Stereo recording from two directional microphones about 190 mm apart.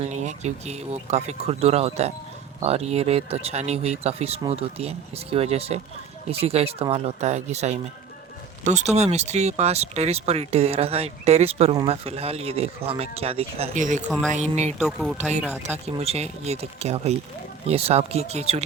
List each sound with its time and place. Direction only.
0.1 s speech: 40° right (ahead or behind)
14.1 s speech: 5° left (ahead or behind)
14.3 s speech: 35° right (ahead or behind)
14.8 s speech: centre (ahead or behind)
15.6 s speech: 35° right (ahead or behind)